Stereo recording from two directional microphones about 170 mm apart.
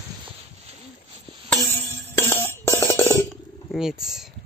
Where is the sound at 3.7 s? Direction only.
5° right (ahead or behind).